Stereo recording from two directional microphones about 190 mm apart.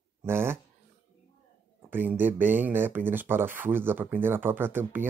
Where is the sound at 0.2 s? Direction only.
10° right (ahead or behind).